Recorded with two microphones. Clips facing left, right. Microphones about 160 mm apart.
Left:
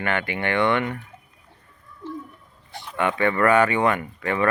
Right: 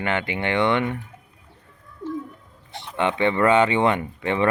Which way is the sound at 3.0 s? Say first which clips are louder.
Right 1 dB; 20° right (ahead or behind).